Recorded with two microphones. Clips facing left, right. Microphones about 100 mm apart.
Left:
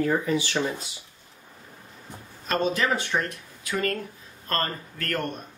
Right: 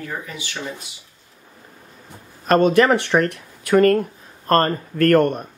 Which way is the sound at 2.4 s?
55° right (ahead or behind).